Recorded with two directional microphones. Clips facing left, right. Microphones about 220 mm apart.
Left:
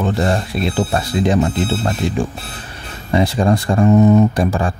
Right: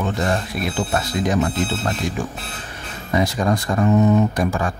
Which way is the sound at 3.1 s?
30° left (ahead or behind).